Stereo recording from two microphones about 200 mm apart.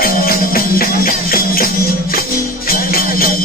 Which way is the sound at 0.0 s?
45° left (ahead or behind).